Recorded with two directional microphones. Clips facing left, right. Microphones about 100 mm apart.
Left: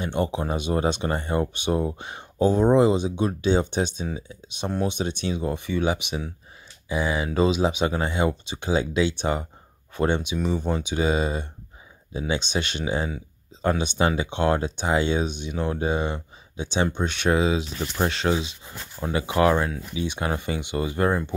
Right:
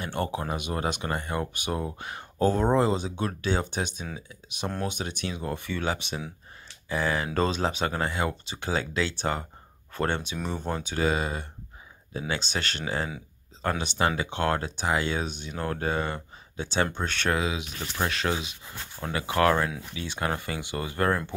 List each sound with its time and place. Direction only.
0.0 s speech: 20° left (ahead or behind)
17.4 s speech: 30° left (ahead or behind)